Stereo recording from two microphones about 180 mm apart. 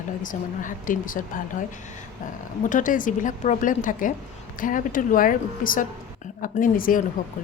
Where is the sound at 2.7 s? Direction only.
45° left (ahead or behind).